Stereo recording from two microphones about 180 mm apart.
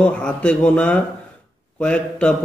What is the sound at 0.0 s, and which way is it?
A man's voice, 5° left (ahead or behind).